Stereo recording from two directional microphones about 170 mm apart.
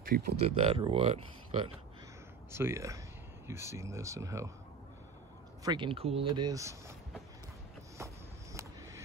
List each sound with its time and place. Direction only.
0.0 s speech: 60° right (ahead or behind)
0.5 s speech: 35° right (ahead or behind)
2.5 s speech: 15° right (ahead or behind)
5.6 s speech: 25° right (ahead or behind)